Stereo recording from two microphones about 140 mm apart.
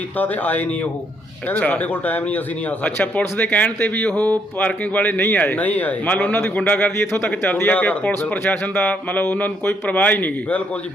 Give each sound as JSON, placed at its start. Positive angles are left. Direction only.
{"t": 0.2, "sound": "speech", "side_deg": 10}